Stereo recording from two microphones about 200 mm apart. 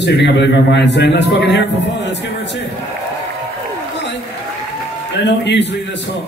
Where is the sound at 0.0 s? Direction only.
60° left (ahead or behind).